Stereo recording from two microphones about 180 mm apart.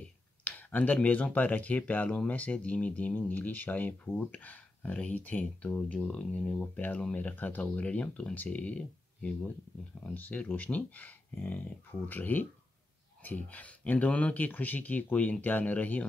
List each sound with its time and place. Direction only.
0.0 s speech: 10° left (ahead or behind)